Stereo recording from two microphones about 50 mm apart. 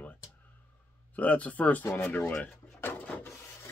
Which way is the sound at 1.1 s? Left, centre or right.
Left.